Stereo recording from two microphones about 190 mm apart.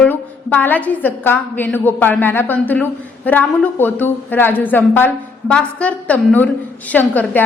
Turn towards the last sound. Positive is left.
turn(degrees=10)  # may be behind; listen again after turning